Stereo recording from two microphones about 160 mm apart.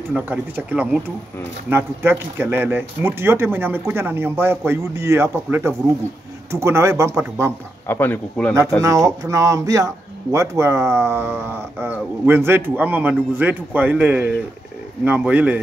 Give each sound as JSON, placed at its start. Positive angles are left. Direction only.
{"t": 0.1, "sound": "speech", "side_deg": -10}
{"t": 7.9, "sound": "speech", "side_deg": 10}
{"t": 8.8, "sound": "speech", "side_deg": -20}